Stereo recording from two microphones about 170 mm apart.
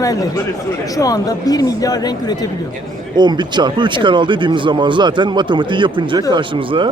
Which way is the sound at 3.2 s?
25° right (ahead or behind).